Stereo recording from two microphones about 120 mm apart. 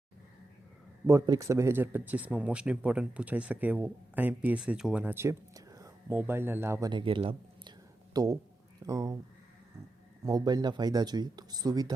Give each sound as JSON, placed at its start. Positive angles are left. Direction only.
{"t": 1.0, "sound": "speech", "side_deg": -25}
{"t": 5.0, "sound": "a sound", "side_deg": -20}
{"t": 6.1, "sound": "speech", "side_deg": -20}
{"t": 6.9, "sound": "speech", "side_deg": -45}
{"t": 8.1, "sound": "speech", "side_deg": -30}
{"t": 10.2, "sound": "speech", "side_deg": -35}